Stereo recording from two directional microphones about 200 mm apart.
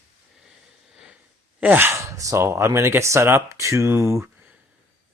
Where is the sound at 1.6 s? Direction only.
10° right (ahead or behind).